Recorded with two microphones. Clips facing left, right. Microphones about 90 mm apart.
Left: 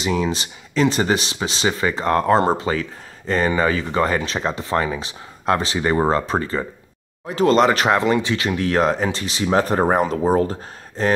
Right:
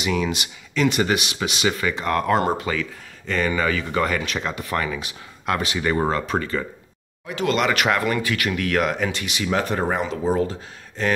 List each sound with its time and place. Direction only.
0.0 s speech: 30° left (ahead or behind)